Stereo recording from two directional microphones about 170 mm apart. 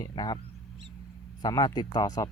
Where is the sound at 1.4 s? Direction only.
25° left (ahead or behind).